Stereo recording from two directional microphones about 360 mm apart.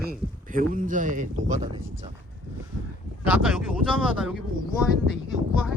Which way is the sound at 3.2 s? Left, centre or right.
Centre.